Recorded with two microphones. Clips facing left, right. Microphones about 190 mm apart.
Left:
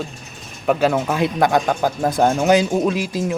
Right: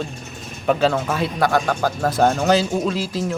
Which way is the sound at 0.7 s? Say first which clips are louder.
Left 1 dB; 10° left (ahead or behind).